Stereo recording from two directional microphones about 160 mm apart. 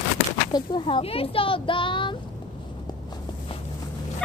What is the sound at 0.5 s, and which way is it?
Speech, 30° left (ahead or behind).